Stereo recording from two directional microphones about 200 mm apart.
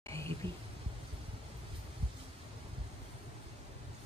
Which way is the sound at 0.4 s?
25° right (ahead or behind).